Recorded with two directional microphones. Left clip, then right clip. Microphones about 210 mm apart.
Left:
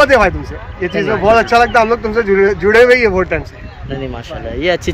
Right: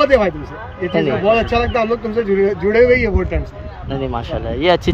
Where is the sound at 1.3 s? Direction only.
5° left (ahead or behind).